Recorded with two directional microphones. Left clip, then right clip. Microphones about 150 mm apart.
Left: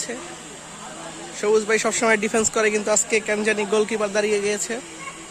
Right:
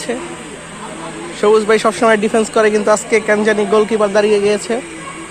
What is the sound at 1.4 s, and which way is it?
Speech, 10° left (ahead or behind).